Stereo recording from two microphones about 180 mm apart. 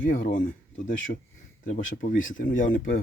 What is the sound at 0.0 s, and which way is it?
Speech, 50° left (ahead or behind).